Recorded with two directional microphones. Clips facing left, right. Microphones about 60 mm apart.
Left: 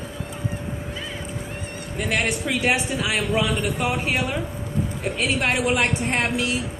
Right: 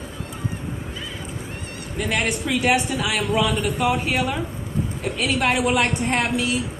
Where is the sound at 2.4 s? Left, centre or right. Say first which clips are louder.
Right 2 dB; left.